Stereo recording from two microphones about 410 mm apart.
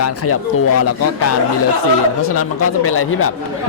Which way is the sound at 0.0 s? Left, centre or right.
Left.